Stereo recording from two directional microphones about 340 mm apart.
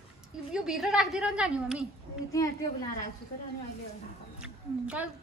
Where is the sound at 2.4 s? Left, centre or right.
Centre.